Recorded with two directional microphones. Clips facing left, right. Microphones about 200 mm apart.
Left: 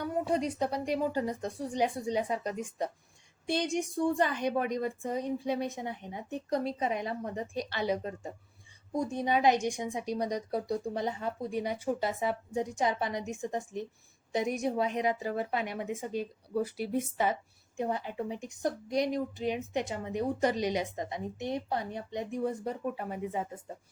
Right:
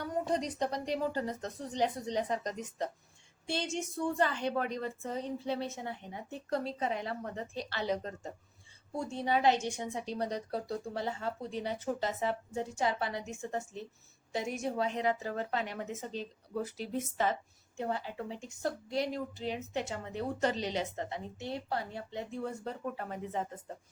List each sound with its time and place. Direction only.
0.0 s a woman's voice: 10° left (ahead or behind)